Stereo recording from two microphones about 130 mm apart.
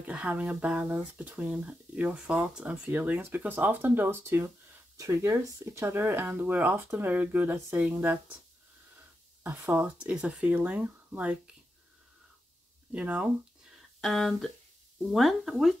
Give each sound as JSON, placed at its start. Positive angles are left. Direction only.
{"t": 0.0, "sound": "speech", "side_deg": -10}
{"t": 2.9, "sound": "speech", "side_deg": -15}
{"t": 9.4, "sound": "speech", "side_deg": -15}
{"t": 12.9, "sound": "speech", "side_deg": -10}